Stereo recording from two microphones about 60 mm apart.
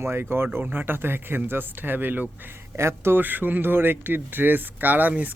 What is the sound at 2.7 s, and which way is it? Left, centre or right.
Speech, right.